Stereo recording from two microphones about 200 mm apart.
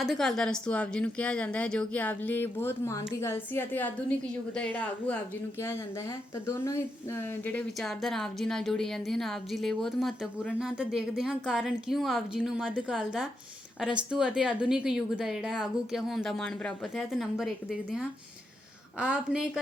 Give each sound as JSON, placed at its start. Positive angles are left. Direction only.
{"t": 0.0, "sound": "a woman's voice", "side_deg": 0}
{"t": 6.5, "sound": "speech", "side_deg": 15}